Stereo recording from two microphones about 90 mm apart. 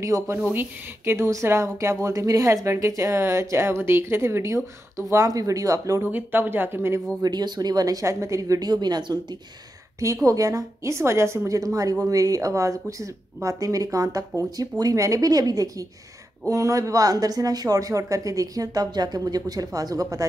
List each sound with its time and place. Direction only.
0.0 s a woman's voice: 35° right (ahead or behind)
0.5 s a woman's voice: 25° right (ahead or behind)
6.0 s speech: 20° right (ahead or behind)
7.2 s speech: 50° right (ahead or behind)
9.9 s a woman's voice: 35° right (ahead or behind)